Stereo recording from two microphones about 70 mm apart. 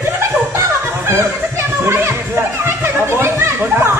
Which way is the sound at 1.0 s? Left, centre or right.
Right.